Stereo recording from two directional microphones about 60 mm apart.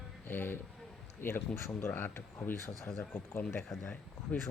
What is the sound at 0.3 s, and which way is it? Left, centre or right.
Speech, left.